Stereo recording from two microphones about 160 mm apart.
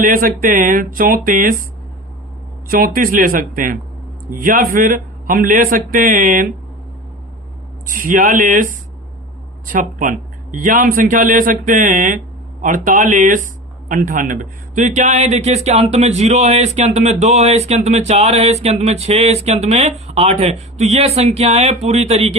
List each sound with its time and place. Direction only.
0.0 s a man's voice: 60° right (ahead or behind)
2.6 s a man's voice: 65° right (ahead or behind)
7.9 s a man's voice: 60° right (ahead or behind)
9.7 s a man's voice: 55° right (ahead or behind); by 22.4 s 40° right (ahead or behind)